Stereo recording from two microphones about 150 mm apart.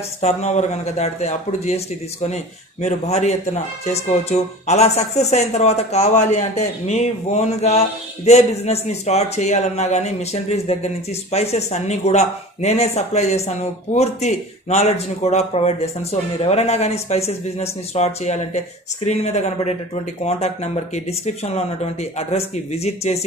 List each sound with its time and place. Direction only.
0.2 s speech: 50° left (ahead or behind)
22.3 s speech: 45° left (ahead or behind)